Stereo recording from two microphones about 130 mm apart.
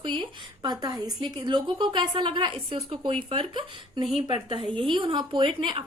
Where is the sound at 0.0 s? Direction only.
40° right (ahead or behind).